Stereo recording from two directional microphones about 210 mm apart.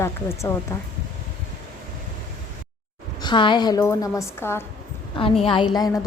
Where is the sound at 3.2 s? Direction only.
20° left (ahead or behind).